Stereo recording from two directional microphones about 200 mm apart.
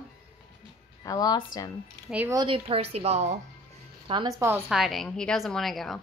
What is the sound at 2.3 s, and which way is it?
A woman's voice, 25° right (ahead or behind).